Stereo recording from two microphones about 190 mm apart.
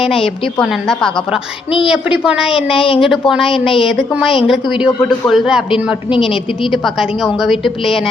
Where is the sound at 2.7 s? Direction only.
30° left (ahead or behind).